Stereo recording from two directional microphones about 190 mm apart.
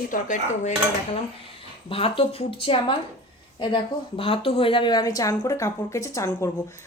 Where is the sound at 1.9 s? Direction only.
30° left (ahead or behind).